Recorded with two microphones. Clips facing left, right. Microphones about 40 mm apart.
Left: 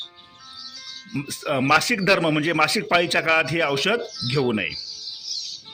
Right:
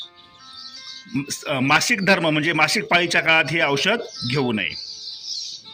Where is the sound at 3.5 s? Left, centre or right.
Right.